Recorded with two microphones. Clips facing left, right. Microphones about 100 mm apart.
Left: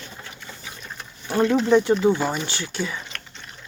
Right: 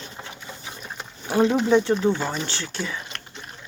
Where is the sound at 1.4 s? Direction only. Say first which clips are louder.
Left 1 dB; 15° right (ahead or behind).